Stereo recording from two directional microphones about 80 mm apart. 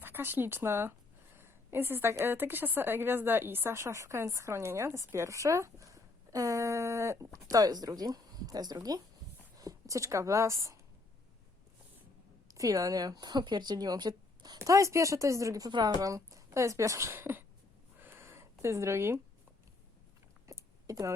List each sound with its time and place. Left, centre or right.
0.0 s a woman's voice: right
7.5 s a woman's voice: right
12.5 s speech: right
14.6 s speech: right
18.0 s a sound: right
20.5 s a sound: right